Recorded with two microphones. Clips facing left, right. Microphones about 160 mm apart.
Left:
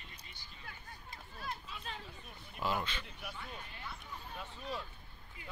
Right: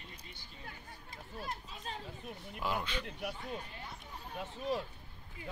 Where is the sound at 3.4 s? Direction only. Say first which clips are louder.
Right 5 dB; 40° right (ahead or behind).